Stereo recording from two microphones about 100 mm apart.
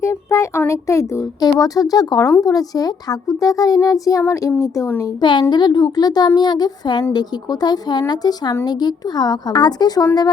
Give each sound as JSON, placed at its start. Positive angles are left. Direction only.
{"t": 0.0, "sound": "a sound", "side_deg": 30}
{"t": 0.7, "sound": "a child's voice", "side_deg": 30}
{"t": 4.2, "sound": "a woman's voice", "side_deg": 25}
{"t": 5.2, "sound": "a woman's voice", "side_deg": 50}